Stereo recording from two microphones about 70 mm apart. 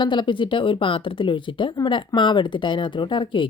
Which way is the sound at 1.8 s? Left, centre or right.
Left.